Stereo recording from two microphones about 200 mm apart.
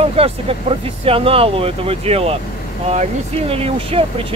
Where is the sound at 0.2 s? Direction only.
30° right (ahead or behind).